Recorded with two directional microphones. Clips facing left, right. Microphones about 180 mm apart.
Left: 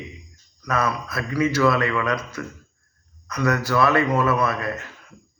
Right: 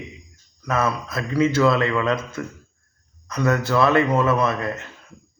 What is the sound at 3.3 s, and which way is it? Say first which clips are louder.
A man's voice: right 1 dB; 25° right (ahead or behind).